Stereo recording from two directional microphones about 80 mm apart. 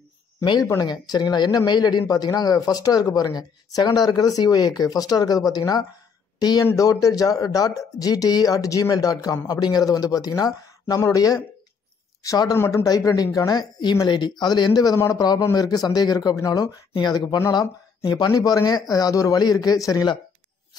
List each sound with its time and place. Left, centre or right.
0.7 s speech: left
13.5 s speech: left
16.9 s speech: left
18.3 s speech: left